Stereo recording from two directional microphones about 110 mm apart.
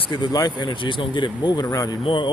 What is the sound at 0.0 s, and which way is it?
Speech, 45° left (ahead or behind).